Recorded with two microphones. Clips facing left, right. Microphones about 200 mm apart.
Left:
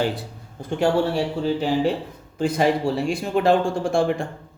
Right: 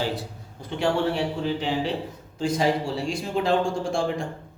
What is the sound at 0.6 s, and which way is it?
Speech, 45° left (ahead or behind).